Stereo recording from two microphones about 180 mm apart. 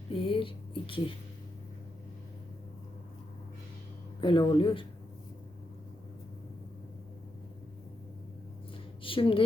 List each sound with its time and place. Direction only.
0.1 s speech: 30° left (ahead or behind)
4.2 s speech: 30° left (ahead or behind)
9.0 s a woman's voice: 30° left (ahead or behind)